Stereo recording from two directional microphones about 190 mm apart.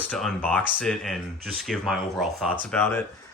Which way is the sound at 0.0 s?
5° left (ahead or behind).